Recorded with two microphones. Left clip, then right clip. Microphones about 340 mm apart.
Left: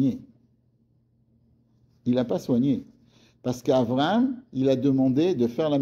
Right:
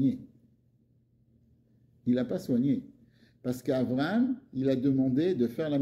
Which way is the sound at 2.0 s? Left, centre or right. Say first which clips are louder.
Left 5 dB; left.